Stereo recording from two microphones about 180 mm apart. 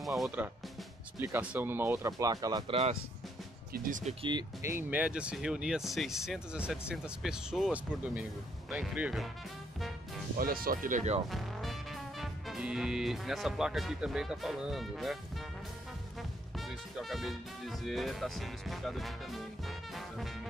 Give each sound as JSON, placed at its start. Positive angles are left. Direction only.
{"t": 0.0, "sound": "speech", "side_deg": 0}
{"t": 1.2, "sound": "speech", "side_deg": -10}
{"t": 3.7, "sound": "speech", "side_deg": -50}
{"t": 4.2, "sound": "speech", "side_deg": -25}
{"t": 4.6, "sound": "speech", "side_deg": -10}
{"t": 10.4, "sound": "speech", "side_deg": -55}
{"t": 11.2, "sound": "speech", "side_deg": 0}
{"t": 16.2, "sound": "speech", "side_deg": 0}
{"t": 19.9, "sound": "music", "side_deg": 0}